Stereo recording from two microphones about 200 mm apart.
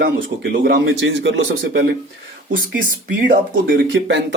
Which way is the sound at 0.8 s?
65° right (ahead or behind).